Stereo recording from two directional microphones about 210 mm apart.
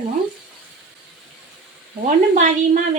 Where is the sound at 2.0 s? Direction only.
35° right (ahead or behind).